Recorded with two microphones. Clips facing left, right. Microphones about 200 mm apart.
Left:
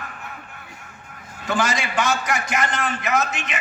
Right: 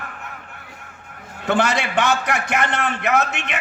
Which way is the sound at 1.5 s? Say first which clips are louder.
Right 4 dB; 65° right (ahead or behind).